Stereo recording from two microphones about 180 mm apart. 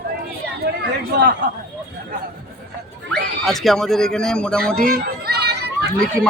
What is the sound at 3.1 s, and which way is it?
Speech, centre (ahead or behind).